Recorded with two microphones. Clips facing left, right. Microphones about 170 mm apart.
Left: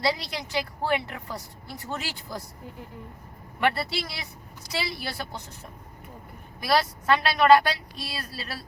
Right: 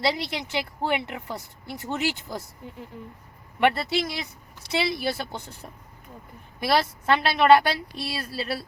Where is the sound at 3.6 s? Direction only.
20° right (ahead or behind).